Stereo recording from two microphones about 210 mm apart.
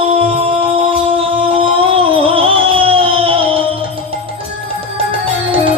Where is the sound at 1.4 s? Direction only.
25° right (ahead or behind).